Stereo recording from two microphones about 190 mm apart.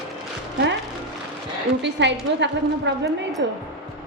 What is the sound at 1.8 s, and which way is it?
A woman's voice, 65° right (ahead or behind).